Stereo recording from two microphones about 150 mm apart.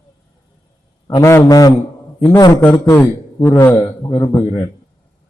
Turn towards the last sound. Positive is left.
turn(degrees=25)  # may be behind; listen again after turning